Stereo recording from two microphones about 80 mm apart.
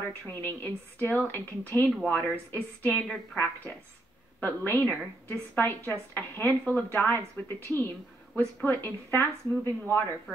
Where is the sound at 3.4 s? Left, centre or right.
Left.